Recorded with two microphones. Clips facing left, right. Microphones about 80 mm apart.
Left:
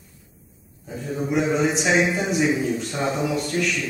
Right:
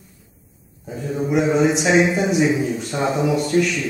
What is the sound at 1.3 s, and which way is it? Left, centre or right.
A woman's voice, centre.